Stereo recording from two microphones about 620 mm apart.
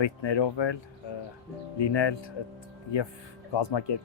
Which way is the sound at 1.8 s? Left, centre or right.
Left.